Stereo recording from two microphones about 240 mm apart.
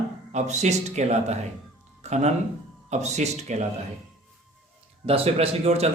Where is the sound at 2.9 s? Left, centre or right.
Right.